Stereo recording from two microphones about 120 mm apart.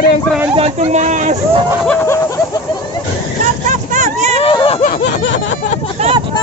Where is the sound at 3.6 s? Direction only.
90° right.